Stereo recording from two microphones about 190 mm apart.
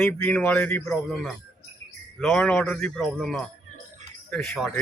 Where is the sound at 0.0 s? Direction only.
5° left (ahead or behind).